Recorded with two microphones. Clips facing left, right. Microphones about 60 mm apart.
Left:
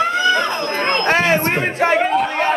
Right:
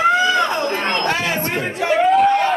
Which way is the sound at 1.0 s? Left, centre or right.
Left.